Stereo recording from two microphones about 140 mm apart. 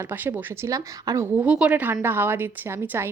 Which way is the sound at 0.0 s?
15° right (ahead or behind).